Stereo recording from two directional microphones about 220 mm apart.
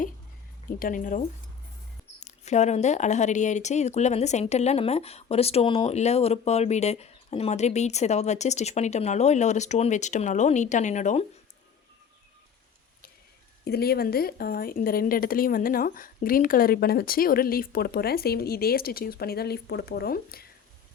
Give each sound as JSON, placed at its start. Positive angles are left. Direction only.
{"t": 0.8, "sound": "speech", "side_deg": 40}
{"t": 2.2, "sound": "speech", "side_deg": 30}
{"t": 13.7, "sound": "a woman's voice", "side_deg": 45}